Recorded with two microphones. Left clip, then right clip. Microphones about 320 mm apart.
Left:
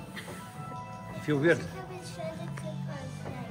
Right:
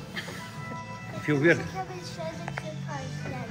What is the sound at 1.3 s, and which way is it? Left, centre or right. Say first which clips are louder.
Speech: right 3 dB; centre.